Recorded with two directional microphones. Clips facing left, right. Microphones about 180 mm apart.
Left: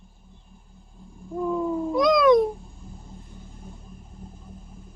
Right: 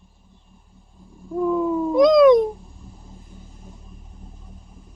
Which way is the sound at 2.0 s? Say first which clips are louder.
Right 5 dB; 20° right (ahead or behind).